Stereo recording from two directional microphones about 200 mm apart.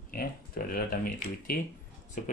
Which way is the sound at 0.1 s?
45° left (ahead or behind).